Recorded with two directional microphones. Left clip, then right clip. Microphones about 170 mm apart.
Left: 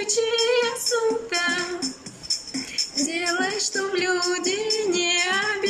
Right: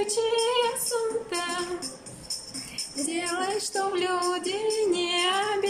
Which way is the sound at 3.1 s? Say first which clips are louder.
Even; 15° right (ahead or behind).